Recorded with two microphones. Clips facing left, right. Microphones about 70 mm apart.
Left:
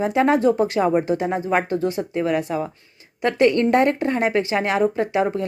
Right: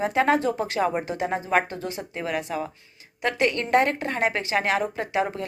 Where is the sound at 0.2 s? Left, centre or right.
Left.